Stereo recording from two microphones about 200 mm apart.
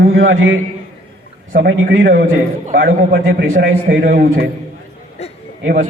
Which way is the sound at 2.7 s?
45° right (ahead or behind).